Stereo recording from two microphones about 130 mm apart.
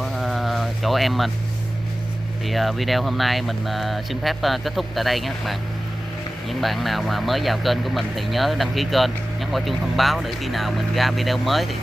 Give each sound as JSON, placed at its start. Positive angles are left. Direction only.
{"t": 0.0, "sound": "a sound", "side_deg": 0}
{"t": 2.4, "sound": "speech", "side_deg": 0}
{"t": 6.6, "sound": "speech", "side_deg": 0}